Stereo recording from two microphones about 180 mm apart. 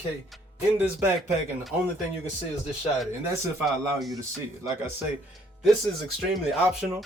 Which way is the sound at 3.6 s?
Centre (ahead or behind).